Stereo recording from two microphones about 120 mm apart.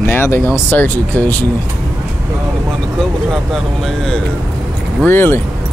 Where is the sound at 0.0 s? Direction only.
20° left (ahead or behind).